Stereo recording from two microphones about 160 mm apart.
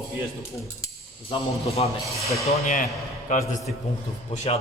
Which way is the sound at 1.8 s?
35° left (ahead or behind).